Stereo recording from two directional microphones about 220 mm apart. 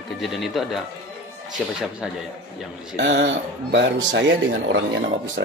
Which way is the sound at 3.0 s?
55° right (ahead or behind).